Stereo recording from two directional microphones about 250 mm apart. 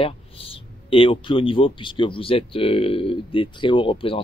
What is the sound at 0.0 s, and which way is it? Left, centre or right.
Speech, left.